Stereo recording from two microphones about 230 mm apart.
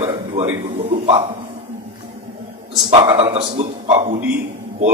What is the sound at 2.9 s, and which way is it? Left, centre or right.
A man's voice, right.